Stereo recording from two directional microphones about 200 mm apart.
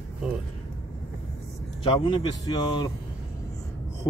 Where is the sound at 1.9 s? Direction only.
25° left (ahead or behind).